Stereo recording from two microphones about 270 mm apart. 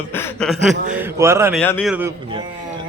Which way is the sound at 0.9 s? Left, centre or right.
Centre.